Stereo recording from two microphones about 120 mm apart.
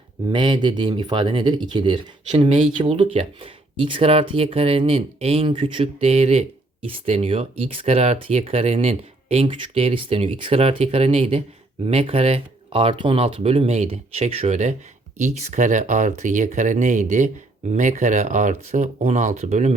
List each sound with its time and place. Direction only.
0.3 s speech: 40° right (ahead or behind); by 5.5 s 55° right (ahead or behind)
5.5 s speech: 45° right (ahead or behind); by 19.7 s 70° right (ahead or behind)